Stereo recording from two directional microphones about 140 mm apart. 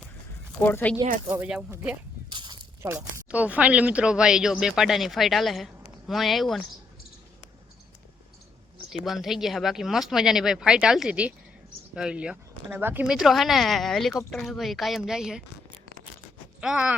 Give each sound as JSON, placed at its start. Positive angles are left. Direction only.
{"t": 0.6, "sound": "speech", "side_deg": 15}
{"t": 1.3, "sound": "speech", "side_deg": -10}
{"t": 2.3, "sound": "a sound", "side_deg": -35}
{"t": 2.8, "sound": "speech", "side_deg": -15}
{"t": 8.9, "sound": "speech", "side_deg": 0}
{"t": 16.6, "sound": "speech", "side_deg": -10}